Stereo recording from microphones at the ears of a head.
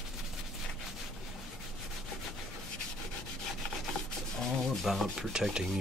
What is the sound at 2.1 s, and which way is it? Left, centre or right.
Rub, left.